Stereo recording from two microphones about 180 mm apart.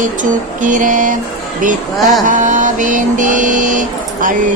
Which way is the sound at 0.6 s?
45° right (ahead or behind).